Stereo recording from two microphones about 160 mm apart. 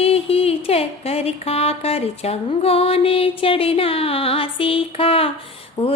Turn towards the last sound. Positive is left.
turn(degrees=40)  # may be behind; listen again after turning